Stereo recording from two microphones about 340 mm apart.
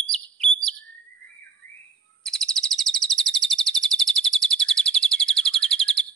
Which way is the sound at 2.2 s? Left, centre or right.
Centre.